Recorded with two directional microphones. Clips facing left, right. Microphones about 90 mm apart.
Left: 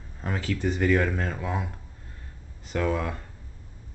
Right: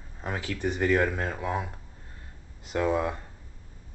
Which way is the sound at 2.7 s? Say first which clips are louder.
Right 1 dB; 20° right (ahead or behind).